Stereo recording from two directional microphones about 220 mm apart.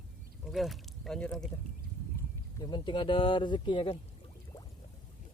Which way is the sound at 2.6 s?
20° left (ahead or behind).